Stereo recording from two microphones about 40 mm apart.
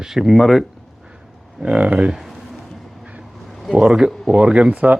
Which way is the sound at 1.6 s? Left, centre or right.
Right.